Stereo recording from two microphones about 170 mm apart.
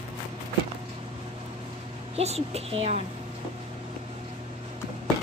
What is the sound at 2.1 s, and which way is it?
Speech, 35° right (ahead or behind).